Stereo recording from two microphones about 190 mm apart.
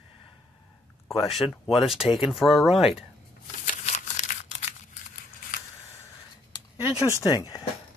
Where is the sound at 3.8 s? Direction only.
40° left (ahead or behind).